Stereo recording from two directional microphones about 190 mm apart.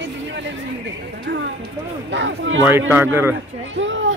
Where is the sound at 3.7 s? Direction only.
80° right.